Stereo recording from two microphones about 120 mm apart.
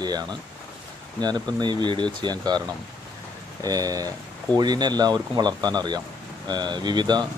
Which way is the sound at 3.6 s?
30° right (ahead or behind).